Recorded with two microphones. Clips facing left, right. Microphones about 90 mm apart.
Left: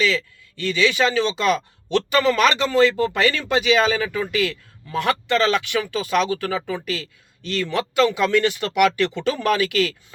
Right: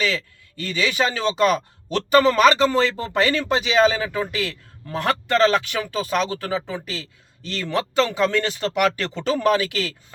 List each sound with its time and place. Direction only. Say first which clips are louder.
0.0 s speech: left 3 dB; 40° right (ahead or behind)